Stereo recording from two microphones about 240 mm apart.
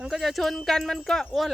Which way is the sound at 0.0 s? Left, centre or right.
Centre.